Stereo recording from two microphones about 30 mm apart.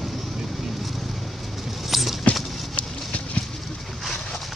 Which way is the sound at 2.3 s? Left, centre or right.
Centre.